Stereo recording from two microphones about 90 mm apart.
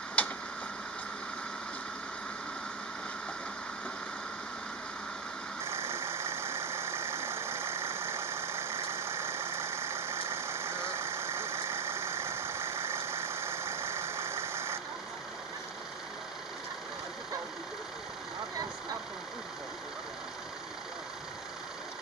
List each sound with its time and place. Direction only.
0.2 s tick-tock: 15° left (ahead or behind)
5.6 s vehicle: 30° right (ahead or behind)